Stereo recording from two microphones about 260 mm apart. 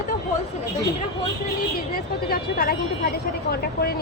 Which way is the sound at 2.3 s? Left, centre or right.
Left.